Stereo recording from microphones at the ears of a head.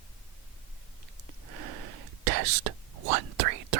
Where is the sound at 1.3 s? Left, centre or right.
Right.